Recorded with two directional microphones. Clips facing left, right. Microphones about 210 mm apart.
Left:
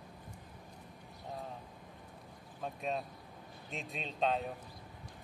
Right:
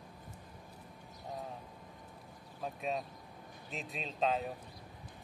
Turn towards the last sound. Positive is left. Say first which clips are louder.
# even
turn(degrees=0)  # may be behind; listen again after turning